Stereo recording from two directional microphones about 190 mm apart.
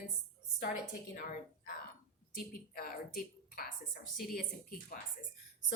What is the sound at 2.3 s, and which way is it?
A woman's voice, 50° left (ahead or behind).